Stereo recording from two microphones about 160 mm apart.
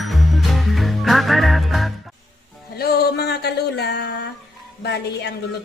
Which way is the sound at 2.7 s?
80° left.